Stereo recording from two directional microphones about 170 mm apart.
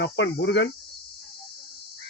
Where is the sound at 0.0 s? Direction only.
85° left.